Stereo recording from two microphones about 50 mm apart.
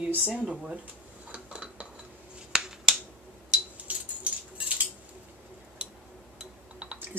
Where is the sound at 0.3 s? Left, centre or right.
Right.